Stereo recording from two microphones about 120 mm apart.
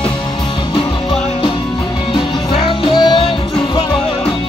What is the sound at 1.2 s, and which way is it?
Music, 55° left (ahead or behind).